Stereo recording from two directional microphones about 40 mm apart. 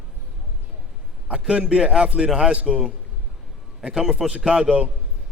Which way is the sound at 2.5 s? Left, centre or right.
Right.